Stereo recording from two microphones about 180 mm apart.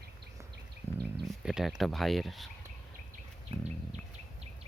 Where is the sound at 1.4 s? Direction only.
Centre (ahead or behind).